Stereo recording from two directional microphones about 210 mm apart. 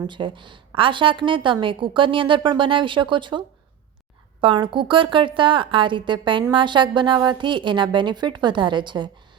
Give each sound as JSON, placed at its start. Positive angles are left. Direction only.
{"t": 0.0, "sound": "a woman's voice", "side_deg": -20}